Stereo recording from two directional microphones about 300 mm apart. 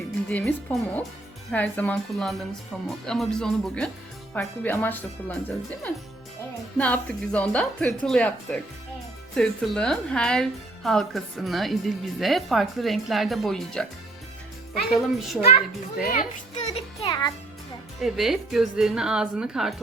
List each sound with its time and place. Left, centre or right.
0.3 s a woman's voice: centre
6.7 s a woman's voice: centre
14.8 s a woman's voice: centre
16.0 s a child's voice: left
18.0 s a woman's voice: centre